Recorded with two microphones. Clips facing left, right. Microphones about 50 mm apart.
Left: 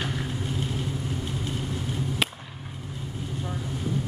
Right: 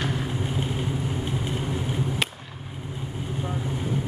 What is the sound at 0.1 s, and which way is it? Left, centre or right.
Vehicle, right.